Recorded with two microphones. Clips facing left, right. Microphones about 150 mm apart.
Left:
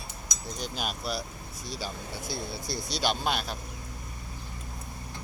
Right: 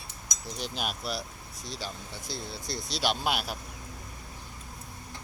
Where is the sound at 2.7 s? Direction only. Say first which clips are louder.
Even; centre (ahead or behind).